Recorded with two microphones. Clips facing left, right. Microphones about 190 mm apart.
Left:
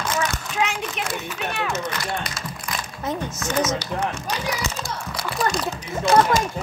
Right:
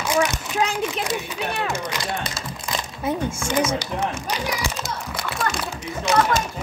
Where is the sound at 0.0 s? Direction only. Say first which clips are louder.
Right 4 dB; 15° right (ahead or behind).